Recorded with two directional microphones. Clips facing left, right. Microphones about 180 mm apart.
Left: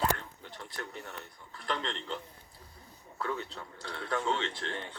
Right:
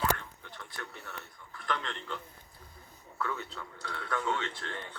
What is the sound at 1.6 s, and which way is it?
Speech, 30° left (ahead or behind).